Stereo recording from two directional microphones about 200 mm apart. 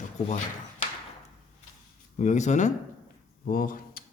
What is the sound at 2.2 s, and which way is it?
A man's voice, 35° left (ahead or behind).